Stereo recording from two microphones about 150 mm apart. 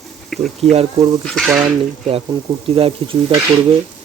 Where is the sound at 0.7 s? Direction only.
40° right (ahead or behind).